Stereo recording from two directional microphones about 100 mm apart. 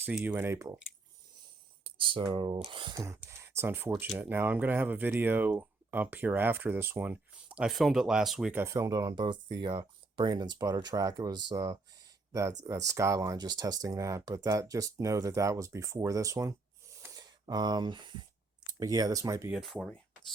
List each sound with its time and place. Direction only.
0.3 s speech: 20° right (ahead or behind)
2.2 s speech: 55° right (ahead or behind)
2.9 s speech: 35° right (ahead or behind); by 7.7 s 15° right (ahead or behind)
7.7 s speech: centre (ahead or behind)
8.5 s speech: 30° right (ahead or behind)
17.2 s speech: 45° right (ahead or behind)
18.7 s speech: 40° right (ahead or behind)
19.5 s speech: 5° left (ahead or behind)